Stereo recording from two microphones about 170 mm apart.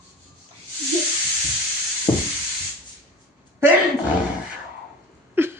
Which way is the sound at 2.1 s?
20° left (ahead or behind).